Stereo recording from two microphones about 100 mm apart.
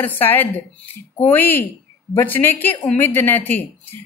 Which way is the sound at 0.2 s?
20° left (ahead or behind).